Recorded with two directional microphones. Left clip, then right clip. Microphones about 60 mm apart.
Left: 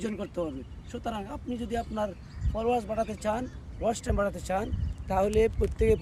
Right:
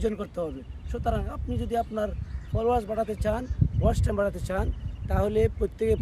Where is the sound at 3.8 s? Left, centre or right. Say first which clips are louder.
Right 2 dB; right.